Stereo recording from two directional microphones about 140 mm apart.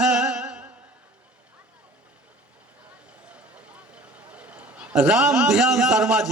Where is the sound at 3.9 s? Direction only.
10° right (ahead or behind).